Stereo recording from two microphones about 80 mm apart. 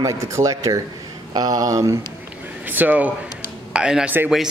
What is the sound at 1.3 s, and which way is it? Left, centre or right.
Speech, right.